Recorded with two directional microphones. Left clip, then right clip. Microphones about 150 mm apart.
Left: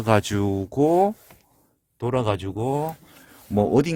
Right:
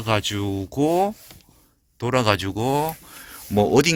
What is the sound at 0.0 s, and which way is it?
Speech, 60° left (ahead or behind).